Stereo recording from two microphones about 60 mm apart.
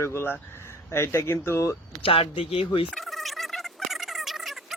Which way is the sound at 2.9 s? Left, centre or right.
Centre.